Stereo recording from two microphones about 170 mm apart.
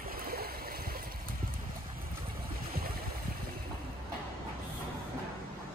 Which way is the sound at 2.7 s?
60° right (ahead or behind).